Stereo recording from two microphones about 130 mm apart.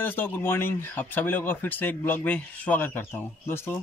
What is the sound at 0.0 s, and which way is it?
Speech, 15° left (ahead or behind).